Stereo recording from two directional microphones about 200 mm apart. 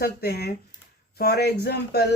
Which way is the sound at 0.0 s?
50° left (ahead or behind).